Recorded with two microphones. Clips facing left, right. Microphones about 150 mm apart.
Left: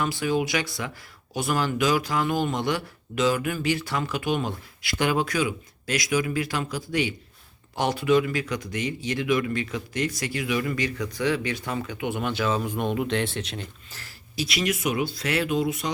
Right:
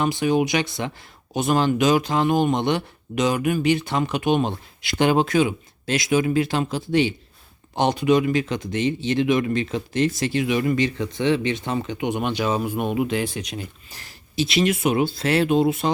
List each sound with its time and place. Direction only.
0.0 s speech: 20° right (ahead or behind)